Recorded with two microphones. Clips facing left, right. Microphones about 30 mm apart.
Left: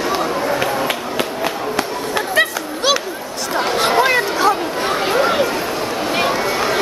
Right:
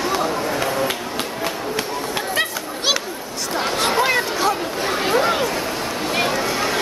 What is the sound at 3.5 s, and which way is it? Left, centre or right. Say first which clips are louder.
Chatter: left 4 dB; centre.